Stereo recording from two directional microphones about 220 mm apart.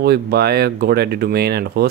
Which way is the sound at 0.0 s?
45° right (ahead or behind).